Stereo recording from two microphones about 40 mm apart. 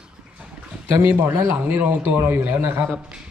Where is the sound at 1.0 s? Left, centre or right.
Right.